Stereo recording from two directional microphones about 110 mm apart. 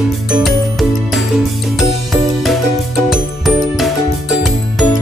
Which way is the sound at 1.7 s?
Centre (ahead or behind).